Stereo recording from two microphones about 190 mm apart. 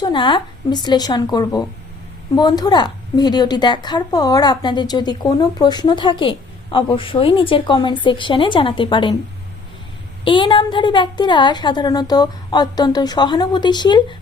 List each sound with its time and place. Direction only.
0.0 s a woman's voice: 25° left (ahead or behind)
10.2 s a woman's voice: 25° left (ahead or behind)